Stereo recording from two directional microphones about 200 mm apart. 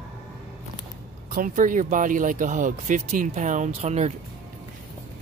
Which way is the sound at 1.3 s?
40° right (ahead or behind).